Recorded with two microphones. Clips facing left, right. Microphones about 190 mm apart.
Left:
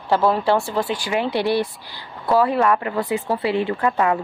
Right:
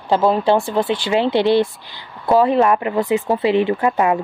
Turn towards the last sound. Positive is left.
turn(degrees=-20)  # may be behind; listen again after turning